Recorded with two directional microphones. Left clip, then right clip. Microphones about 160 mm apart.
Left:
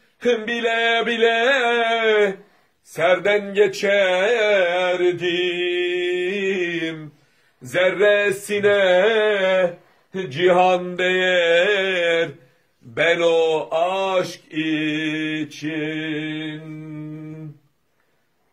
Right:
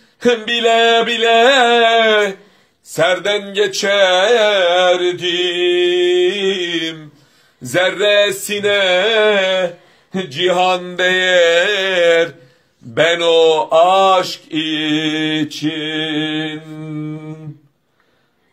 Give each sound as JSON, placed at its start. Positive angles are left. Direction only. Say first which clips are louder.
{"t": 0.2, "sound": "mantra", "louder": "right 6 dB", "side_deg": 20}
{"t": 2.9, "sound": "a sound", "louder": "right 3 dB", "side_deg": 25}
{"t": 7.7, "sound": "mantra", "louder": "right 4 dB", "side_deg": 25}